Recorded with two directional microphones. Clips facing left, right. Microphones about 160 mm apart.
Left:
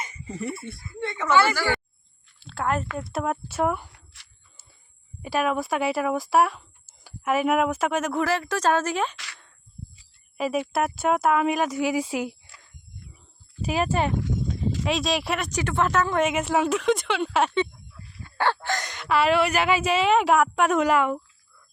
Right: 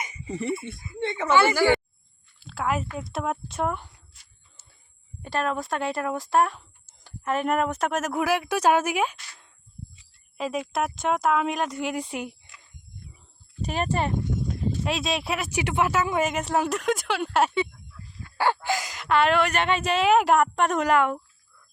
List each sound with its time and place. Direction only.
0.0 s speech: 20° right (ahead or behind)
2.4 s a sound: centre (ahead or behind)
3.0 s speech: centre (ahead or behind)
3.9 s a sound: 80° left
5.2 s speech: 10° left (ahead or behind); by 9.1 s 10° right (ahead or behind)
9.1 s a sound: 90° left
10.3 s speech: 5° left (ahead or behind)
12.1 s speech: 80° left
13.6 s speech: 5° left (ahead or behind)